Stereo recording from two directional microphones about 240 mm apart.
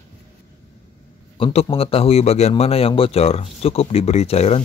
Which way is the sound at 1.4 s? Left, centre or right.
Left.